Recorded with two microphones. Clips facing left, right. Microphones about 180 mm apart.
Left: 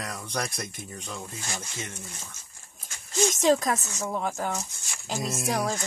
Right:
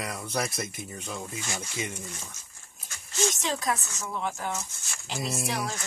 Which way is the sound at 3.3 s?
45° left (ahead or behind).